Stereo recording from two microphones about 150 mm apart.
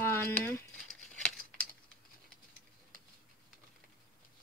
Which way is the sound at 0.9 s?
Centre (ahead or behind).